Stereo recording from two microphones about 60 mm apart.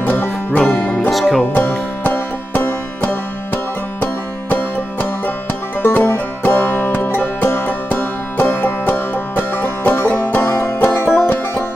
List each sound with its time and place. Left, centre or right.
0.0 s music: left
0.5 s music: left
1.1 s music: centre
1.5 s music: left
5.8 s music: left